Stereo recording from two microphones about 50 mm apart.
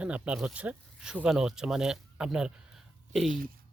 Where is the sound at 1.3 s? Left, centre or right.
Centre.